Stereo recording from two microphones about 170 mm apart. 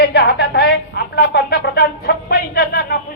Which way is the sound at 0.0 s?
70° left (ahead or behind).